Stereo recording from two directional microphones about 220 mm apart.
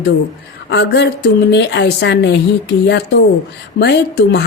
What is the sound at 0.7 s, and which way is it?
A woman's voice, 50° left (ahead or behind).